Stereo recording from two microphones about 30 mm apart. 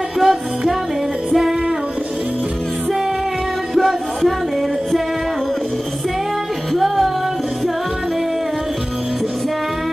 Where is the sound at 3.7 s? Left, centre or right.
Centre.